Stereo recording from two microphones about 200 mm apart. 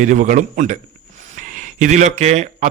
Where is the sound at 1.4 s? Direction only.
40° right (ahead or behind).